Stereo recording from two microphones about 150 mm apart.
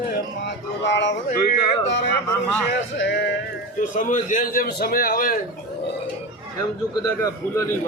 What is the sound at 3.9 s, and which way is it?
A man's voice, 60° left (ahead or behind).